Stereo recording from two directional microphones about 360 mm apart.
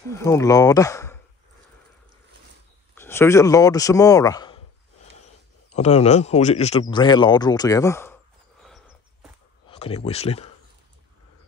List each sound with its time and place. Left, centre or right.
0.1 s speech: centre
2.9 s speech: centre
5.7 s speech: centre
8.6 s a sound: centre
9.7 s speech: centre